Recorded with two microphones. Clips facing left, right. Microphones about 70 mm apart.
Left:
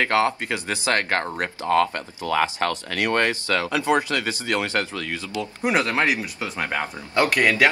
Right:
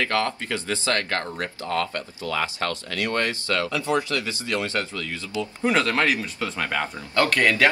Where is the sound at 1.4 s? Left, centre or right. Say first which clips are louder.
Left 6 dB; left.